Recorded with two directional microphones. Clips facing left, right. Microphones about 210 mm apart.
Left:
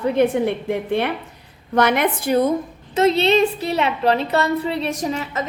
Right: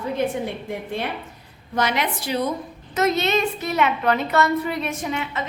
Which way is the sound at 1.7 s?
55° left (ahead or behind).